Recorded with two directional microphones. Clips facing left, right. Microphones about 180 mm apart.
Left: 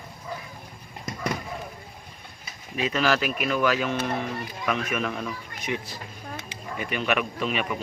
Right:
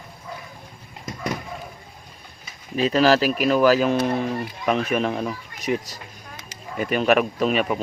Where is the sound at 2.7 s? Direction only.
35° right (ahead or behind).